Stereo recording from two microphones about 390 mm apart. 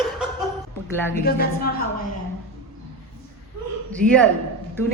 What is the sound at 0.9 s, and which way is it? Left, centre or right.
Speech, centre.